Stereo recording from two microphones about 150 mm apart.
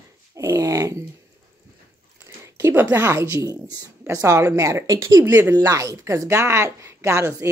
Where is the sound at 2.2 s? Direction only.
15° right (ahead or behind).